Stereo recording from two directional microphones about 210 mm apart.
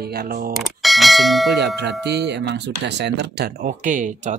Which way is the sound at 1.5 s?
55° right (ahead or behind).